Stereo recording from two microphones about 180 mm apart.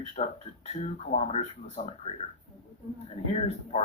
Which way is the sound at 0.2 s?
40° left (ahead or behind).